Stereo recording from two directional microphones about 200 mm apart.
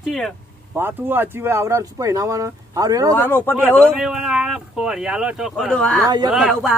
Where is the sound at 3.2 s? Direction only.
10° left (ahead or behind).